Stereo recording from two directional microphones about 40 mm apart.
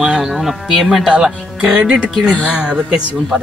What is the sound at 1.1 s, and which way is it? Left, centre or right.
Speech, centre.